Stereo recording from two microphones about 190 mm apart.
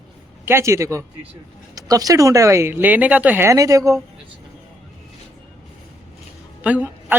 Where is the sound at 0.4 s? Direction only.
15° right (ahead or behind).